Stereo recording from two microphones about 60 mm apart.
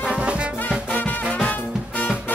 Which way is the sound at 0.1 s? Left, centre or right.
Centre.